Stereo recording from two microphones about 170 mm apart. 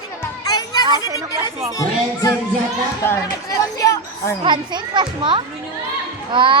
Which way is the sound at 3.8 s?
20° left (ahead or behind).